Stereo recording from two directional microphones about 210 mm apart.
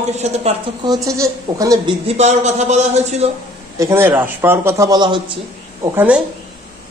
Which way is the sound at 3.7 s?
15° right (ahead or behind).